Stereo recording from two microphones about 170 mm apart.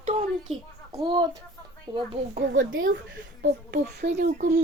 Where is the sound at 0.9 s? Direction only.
25° right (ahead or behind).